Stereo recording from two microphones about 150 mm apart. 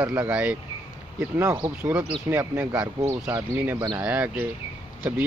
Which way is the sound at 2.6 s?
10° right (ahead or behind).